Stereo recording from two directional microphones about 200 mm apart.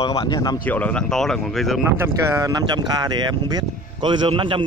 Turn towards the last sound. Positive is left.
turn(degrees=-25)  # may be behind; listen again after turning